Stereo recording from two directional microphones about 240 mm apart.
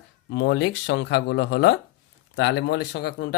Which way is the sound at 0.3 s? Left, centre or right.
Left.